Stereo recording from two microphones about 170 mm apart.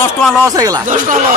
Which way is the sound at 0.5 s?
20° right (ahead or behind).